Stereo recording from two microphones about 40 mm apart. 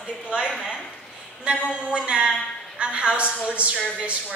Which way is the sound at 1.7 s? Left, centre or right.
Right.